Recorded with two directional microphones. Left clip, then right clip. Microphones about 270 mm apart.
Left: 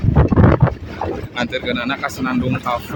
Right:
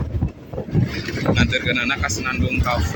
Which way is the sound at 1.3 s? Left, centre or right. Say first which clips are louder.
Right 5 dB; centre.